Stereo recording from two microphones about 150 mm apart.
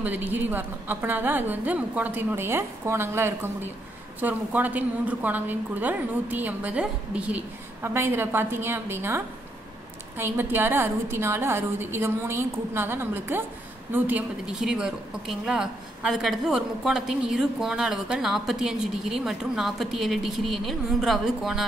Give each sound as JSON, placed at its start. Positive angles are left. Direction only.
{"t": 0.0, "sound": "a woman's voice", "side_deg": -10}